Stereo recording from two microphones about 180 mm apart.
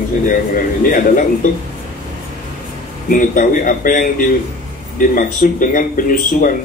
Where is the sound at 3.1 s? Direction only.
50° left (ahead or behind).